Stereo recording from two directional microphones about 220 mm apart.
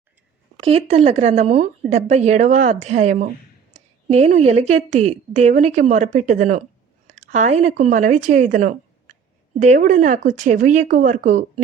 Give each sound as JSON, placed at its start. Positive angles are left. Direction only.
{"t": 0.6, "sound": "a woman's voice", "side_deg": -25}